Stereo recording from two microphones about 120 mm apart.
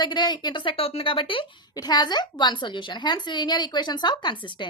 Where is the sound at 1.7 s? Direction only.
35° left (ahead or behind).